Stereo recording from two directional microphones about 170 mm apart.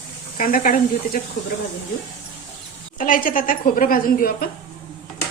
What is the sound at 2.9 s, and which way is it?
Speech, 50° left (ahead or behind).